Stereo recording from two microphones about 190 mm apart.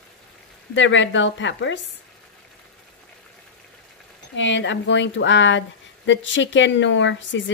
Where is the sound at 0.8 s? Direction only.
80° left.